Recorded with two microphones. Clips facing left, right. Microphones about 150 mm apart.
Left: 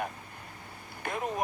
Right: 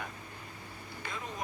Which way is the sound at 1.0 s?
60° left (ahead or behind).